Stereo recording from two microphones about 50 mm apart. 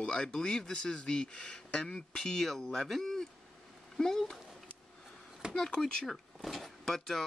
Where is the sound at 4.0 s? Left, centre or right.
Centre.